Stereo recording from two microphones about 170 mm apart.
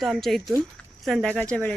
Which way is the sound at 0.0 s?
Centre (ahead or behind).